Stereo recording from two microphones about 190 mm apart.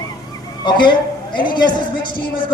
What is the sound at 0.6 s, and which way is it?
A woman's voice, 25° left (ahead or behind).